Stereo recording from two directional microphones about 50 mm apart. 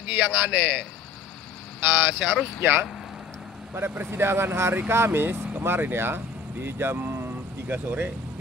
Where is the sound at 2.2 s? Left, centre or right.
Centre.